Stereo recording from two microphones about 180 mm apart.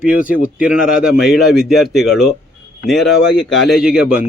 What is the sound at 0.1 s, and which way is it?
Speech, 50° left (ahead or behind).